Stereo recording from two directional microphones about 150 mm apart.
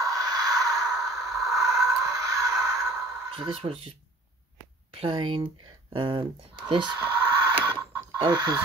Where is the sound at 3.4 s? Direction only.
40° right (ahead or behind).